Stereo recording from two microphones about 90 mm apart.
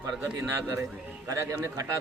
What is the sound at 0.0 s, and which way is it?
A man's voice, 30° right (ahead or behind).